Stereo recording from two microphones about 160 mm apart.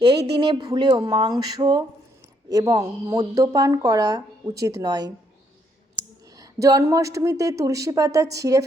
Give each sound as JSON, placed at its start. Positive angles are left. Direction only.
{"t": 0.3, "sound": "a woman's voice", "side_deg": -30}
{"t": 6.3, "sound": "a woman's voice", "side_deg": -20}